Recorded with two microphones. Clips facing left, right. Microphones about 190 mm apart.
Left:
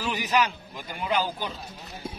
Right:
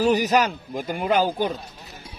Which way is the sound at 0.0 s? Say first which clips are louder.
Right 7 dB; 40° right (ahead or behind).